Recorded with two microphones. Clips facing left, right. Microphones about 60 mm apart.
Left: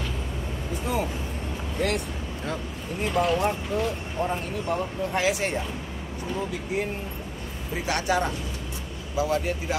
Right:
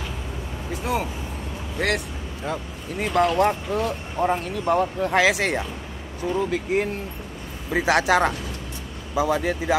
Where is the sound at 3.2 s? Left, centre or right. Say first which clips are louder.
Right 5 dB; right.